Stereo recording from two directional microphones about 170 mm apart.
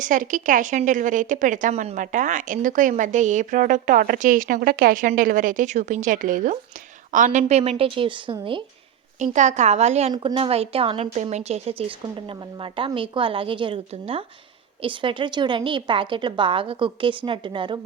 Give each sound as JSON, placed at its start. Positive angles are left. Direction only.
{"t": 0.0, "sound": "a woman's voice", "side_deg": -50}
{"t": 9.1, "sound": "a woman's voice", "side_deg": -45}
{"t": 10.1, "sound": "a woman's voice", "side_deg": -30}